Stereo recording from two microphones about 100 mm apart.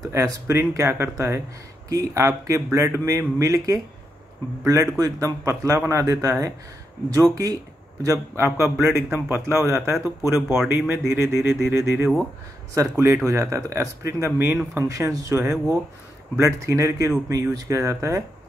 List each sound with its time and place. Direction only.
0.0 s speech: 30° right (ahead or behind)